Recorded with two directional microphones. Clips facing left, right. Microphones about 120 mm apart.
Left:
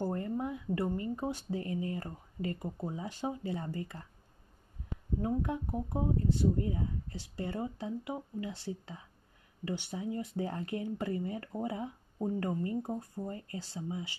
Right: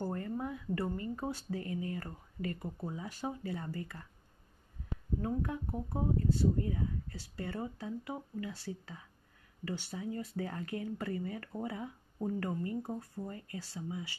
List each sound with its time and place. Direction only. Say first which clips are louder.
0.0 s speech: left 3 dB; 25° left (ahead or behind)
5.2 s speech: left 3 dB; 20° left (ahead or behind)